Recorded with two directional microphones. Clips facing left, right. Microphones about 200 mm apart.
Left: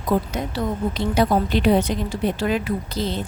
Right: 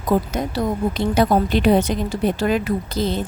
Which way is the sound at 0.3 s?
45° right (ahead or behind).